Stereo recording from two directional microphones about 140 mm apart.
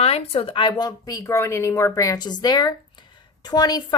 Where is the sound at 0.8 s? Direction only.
25° left (ahead or behind).